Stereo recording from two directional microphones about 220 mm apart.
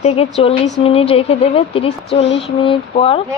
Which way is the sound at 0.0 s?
25° left (ahead or behind).